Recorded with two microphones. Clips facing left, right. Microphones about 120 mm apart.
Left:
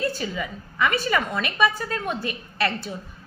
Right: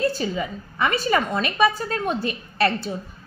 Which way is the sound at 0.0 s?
30° right (ahead or behind).